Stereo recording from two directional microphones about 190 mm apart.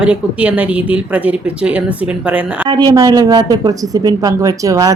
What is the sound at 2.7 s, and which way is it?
A woman's voice, 20° right (ahead or behind).